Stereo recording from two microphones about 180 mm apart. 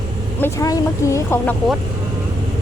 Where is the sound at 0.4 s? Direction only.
15° left (ahead or behind).